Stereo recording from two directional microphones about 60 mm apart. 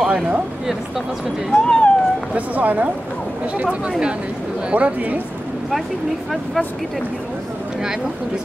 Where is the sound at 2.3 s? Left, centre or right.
Right.